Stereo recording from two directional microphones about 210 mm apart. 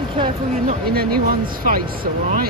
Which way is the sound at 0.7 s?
45° right (ahead or behind).